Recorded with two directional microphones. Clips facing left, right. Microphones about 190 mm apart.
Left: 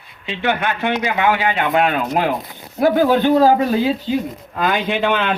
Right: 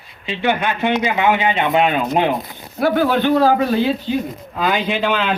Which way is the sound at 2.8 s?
15° left (ahead or behind).